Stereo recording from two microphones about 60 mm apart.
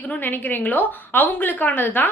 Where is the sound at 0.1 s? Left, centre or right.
Left.